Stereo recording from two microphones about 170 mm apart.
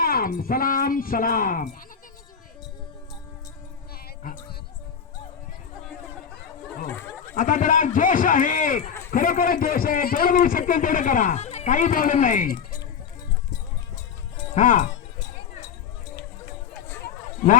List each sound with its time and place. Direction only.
0.0 s speech: 60° left (ahead or behind)
6.8 s a sound: 15° left (ahead or behind)
7.3 s a man's voice: 50° left (ahead or behind)
14.5 s a man's voice: 50° left (ahead or behind)